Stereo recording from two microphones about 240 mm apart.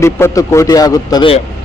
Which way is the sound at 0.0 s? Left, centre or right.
Centre.